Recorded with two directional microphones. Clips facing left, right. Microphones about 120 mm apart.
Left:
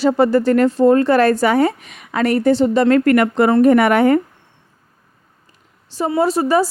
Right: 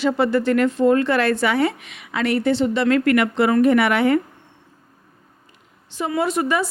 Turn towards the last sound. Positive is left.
turn(degrees=35)  # may be behind; listen again after turning